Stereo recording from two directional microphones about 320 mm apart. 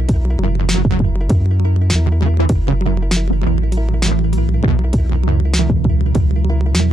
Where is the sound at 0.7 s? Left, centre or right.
Centre.